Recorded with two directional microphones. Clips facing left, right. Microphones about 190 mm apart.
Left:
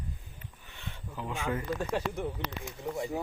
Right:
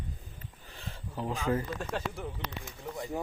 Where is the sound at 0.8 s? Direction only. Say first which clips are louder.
Right 3 dB; 35° right (ahead or behind).